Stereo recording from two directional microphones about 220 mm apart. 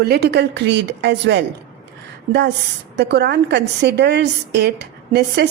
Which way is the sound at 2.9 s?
50° right (ahead or behind).